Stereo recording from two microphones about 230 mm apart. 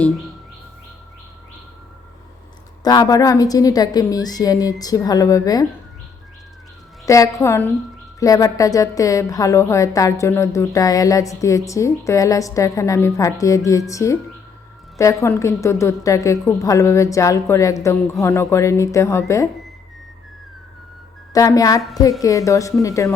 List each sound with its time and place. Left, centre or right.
2.8 s a woman's voice: centre
7.0 s a woman's voice: centre
21.3 s a woman's voice: centre